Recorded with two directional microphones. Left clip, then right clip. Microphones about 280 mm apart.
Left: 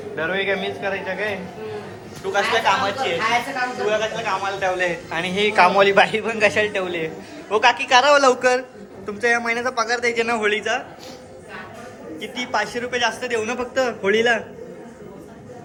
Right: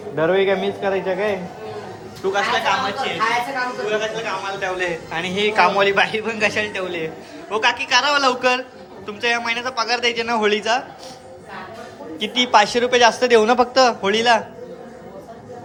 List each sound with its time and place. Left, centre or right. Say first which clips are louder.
0.2 s a man's voice: right 5 dB; right
2.2 s a man's voice: even; centre
12.2 s a man's voice: right 9 dB; centre